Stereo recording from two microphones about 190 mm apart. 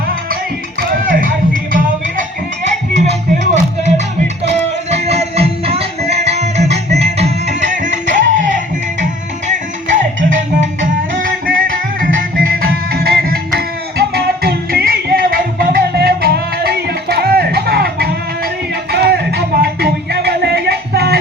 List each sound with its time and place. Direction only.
0.8 s music: 45° right (ahead or behind)
3.1 s music: 40° right (ahead or behind)
10.6 s music: 75° right (ahead or behind)
11.2 s music: 45° right (ahead or behind)